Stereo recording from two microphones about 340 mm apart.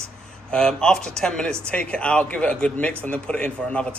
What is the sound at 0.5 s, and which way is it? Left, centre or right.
Speech, centre.